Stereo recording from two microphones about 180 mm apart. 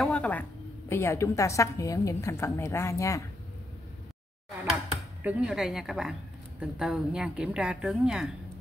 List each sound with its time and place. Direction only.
0.0 s a woman's voice: 5° left (ahead or behind)
5.2 s a woman's voice: 5° right (ahead or behind)